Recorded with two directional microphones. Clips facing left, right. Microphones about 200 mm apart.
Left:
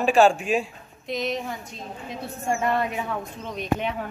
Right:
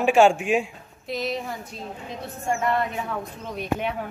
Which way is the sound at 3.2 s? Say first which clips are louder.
Even; 10° right (ahead or behind).